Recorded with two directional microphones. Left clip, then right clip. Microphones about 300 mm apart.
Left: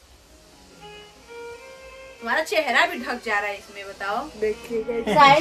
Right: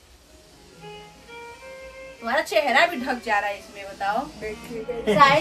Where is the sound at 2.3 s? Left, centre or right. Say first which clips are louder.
Right 1 dB; centre.